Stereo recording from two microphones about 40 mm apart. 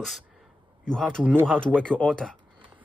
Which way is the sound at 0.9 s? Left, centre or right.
Left.